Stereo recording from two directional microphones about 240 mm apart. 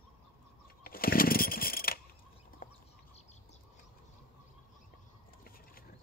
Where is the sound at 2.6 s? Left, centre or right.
Left.